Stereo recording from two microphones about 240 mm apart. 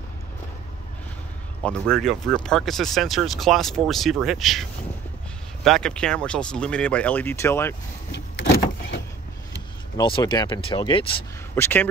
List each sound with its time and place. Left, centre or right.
1.6 s speech: centre
9.9 s speech: centre
11.5 s speech: centre